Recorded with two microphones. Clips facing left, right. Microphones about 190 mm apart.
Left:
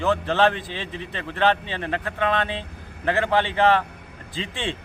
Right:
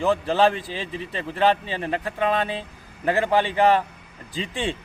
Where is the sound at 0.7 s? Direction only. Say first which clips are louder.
Right 2 dB; 40° right (ahead or behind).